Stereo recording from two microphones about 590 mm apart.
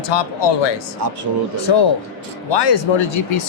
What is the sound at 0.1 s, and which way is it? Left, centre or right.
Speech, left.